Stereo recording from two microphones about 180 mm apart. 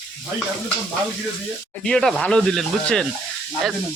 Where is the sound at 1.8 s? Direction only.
5° left (ahead or behind).